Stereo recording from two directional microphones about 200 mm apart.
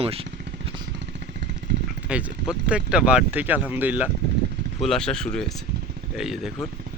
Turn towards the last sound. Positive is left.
turn(degrees=0)  # may be behind; listen again after turning